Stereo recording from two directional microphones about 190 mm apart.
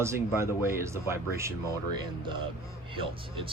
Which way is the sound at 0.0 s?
15° right (ahead or behind).